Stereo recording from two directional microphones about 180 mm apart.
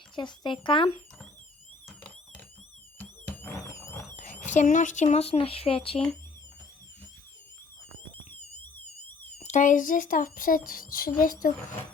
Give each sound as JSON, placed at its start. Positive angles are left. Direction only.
{"t": 0.2, "sound": "speech", "side_deg": 25}
{"t": 3.0, "sound": "alarm", "side_deg": 10}
{"t": 4.2, "sound": "speech", "side_deg": 45}
{"t": 9.4, "sound": "speech", "side_deg": 45}